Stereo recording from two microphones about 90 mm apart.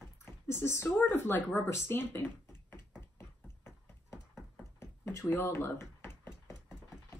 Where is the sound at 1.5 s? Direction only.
25° left (ahead or behind).